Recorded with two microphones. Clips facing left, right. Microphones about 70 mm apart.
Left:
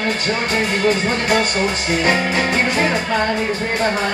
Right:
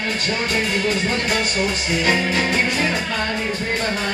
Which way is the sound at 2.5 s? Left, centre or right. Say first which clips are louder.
Left 3 dB; left.